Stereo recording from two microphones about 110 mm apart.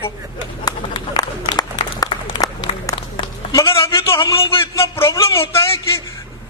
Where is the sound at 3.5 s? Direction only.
25° left (ahead or behind).